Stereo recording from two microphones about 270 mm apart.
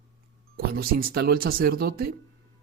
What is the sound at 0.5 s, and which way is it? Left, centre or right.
Speech, right.